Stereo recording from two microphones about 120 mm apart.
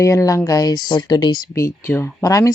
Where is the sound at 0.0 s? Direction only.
25° left (ahead or behind).